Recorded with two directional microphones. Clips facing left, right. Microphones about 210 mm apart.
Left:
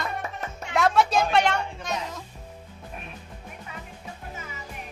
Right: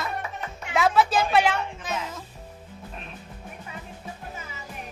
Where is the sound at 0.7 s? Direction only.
Centre (ahead or behind).